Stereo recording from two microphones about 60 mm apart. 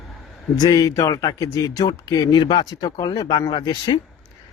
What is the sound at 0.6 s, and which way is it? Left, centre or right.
Speech, left.